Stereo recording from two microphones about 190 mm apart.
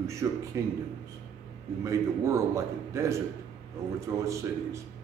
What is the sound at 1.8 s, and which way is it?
A man's voice, 15° right (ahead or behind).